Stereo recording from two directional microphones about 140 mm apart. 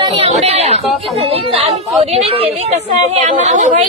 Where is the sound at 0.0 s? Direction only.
40° right (ahead or behind).